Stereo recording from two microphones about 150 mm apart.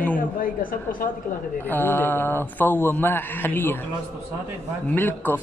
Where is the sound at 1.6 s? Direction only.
10° left (ahead or behind).